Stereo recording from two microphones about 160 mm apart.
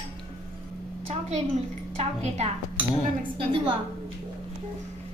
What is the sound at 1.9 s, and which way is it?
Speech, 45° right (ahead or behind).